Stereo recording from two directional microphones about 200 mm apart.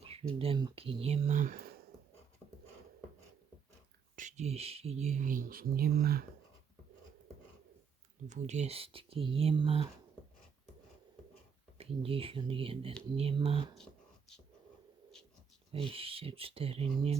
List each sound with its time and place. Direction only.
0.0 s speech: 30° right (ahead or behind)
4.1 s speech: 40° right (ahead or behind)
8.3 s speech: 35° right (ahead or behind)
11.8 s speech: 30° right (ahead or behind)
13.7 s a sound: 5° left (ahead or behind)
15.7 s speech: 25° right (ahead or behind)